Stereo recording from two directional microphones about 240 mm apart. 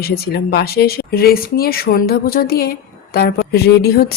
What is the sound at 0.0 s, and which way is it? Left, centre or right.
Speech, left.